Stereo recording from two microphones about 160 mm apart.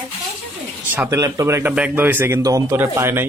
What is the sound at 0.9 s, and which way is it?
A man's voice, 20° right (ahead or behind).